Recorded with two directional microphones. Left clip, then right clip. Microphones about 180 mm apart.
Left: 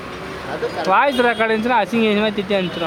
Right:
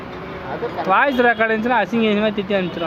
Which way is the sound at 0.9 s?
15° left (ahead or behind).